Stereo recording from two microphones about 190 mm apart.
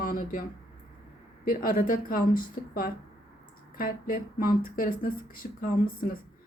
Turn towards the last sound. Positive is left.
turn(degrees=50)  # may be behind; listen again after turning